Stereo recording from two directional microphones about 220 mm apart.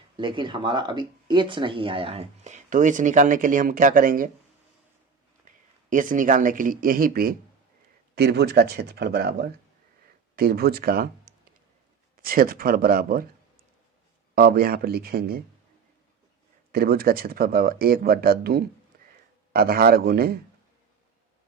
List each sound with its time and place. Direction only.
0.2 s speech: 20° right (ahead or behind); by 4.3 s 40° right (ahead or behind)
5.5 s speech: 35° right (ahead or behind)
14.3 s speech: 45° right (ahead or behind)
16.7 s speech: 45° right (ahead or behind)
18.9 s a sound: 45° right (ahead or behind)
19.5 s speech: 45° right (ahead or behind)